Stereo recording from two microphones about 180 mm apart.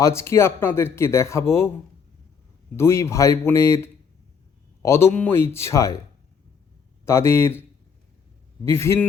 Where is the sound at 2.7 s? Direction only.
15° left (ahead or behind).